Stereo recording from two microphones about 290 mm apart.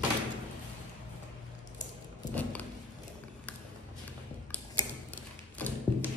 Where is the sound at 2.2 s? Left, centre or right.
Centre.